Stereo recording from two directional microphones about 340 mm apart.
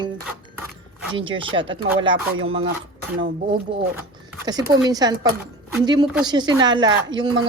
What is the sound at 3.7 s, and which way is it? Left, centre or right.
Speech, centre.